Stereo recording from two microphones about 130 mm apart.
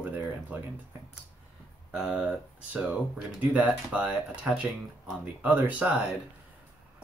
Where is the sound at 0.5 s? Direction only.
10° right (ahead or behind).